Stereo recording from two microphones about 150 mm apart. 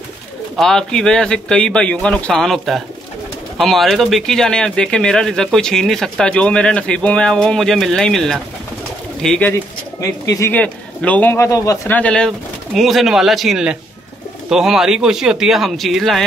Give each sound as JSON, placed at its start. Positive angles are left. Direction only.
{"t": 0.6, "sound": "speech", "side_deg": 5}
{"t": 9.5, "sound": "speech", "side_deg": 20}
{"t": 10.5, "sound": "a man's voice", "side_deg": 10}
{"t": 11.9, "sound": "a man's voice", "side_deg": 5}